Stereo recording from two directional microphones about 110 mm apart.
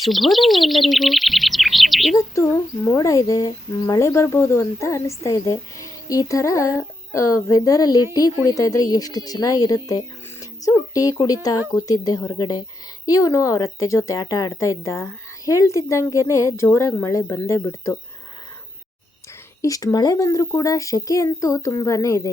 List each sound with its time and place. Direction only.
0.0 s speech: centre (ahead or behind)
2.1 s speech: 30° left (ahead or behind)
19.6 s speech: 30° left (ahead or behind)